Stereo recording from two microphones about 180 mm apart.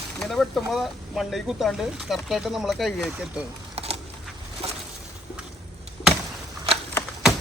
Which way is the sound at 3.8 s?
35° right (ahead or behind).